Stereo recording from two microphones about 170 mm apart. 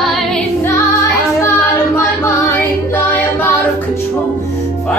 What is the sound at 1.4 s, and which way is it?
Music, 15° left (ahead or behind).